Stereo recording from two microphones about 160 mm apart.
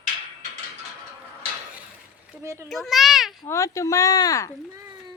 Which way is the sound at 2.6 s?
Centre (ahead or behind).